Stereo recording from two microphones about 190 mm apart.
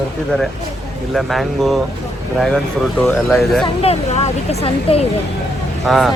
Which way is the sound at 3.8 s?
35° left (ahead or behind).